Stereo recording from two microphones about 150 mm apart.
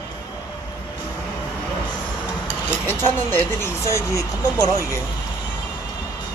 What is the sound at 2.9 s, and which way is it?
Speech, 15° left (ahead or behind).